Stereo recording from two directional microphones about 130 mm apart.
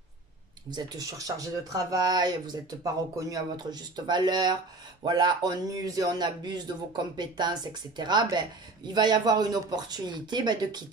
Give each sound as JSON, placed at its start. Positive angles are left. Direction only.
{"t": 0.7, "sound": "speech", "side_deg": -30}